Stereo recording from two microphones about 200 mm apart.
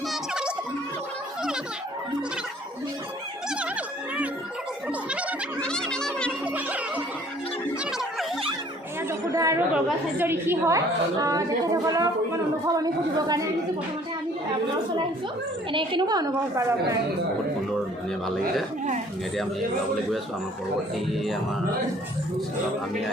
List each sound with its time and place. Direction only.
0.1 s a sound: 5° right (ahead or behind)
3.5 s music: 5° right (ahead or behind)
5.5 s a sound: 5° left (ahead or behind)
6.4 s music: 5° right (ahead or behind)
9.0 s a woman's voice: 15° right (ahead or behind)
15.7 s a woman's voice: 25° right (ahead or behind)